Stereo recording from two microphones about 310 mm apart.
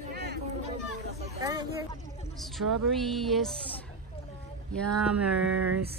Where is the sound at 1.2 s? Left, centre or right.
Centre.